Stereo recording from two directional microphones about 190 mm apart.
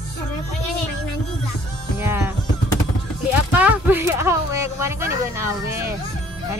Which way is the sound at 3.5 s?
10° right (ahead or behind).